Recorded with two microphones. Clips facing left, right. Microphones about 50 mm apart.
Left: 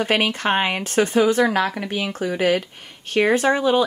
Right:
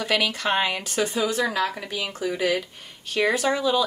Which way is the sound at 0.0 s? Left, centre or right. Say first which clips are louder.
Left 4 dB; left.